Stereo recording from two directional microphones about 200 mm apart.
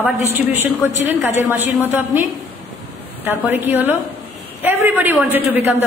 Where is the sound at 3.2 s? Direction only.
10° right (ahead or behind).